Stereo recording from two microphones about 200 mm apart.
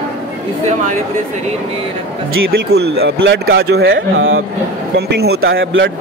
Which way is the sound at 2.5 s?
55° right (ahead or behind).